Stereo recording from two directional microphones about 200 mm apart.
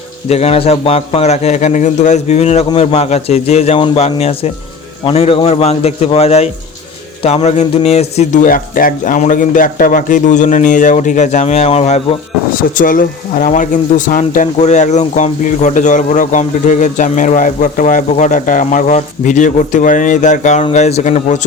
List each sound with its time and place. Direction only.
0.3 s a man's voice: 30° left (ahead or behind)
12.7 s speech: 45° left (ahead or behind)